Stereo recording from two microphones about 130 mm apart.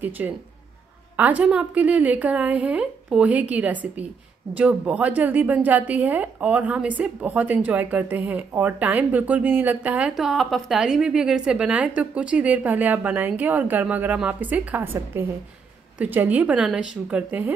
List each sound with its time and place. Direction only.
0.2 s a woman's voice: 15° right (ahead or behind)